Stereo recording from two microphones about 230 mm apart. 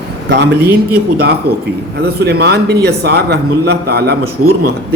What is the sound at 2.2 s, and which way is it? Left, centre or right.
A man's voice, right.